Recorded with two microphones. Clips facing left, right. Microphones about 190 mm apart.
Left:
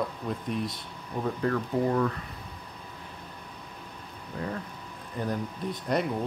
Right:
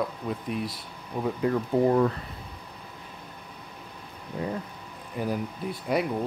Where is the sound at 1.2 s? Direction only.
15° right (ahead or behind).